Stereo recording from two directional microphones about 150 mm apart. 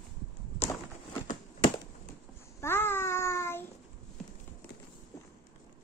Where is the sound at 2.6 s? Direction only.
15° left (ahead or behind).